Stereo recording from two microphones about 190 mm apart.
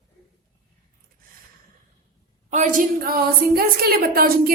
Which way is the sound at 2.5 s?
40° right (ahead or behind).